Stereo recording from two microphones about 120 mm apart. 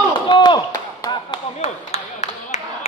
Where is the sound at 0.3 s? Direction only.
40° left (ahead or behind).